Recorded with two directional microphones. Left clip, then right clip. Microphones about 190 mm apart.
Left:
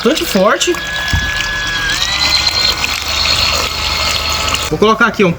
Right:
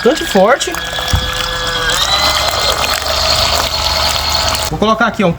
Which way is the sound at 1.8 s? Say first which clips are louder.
Right 3 dB; 10° right (ahead or behind).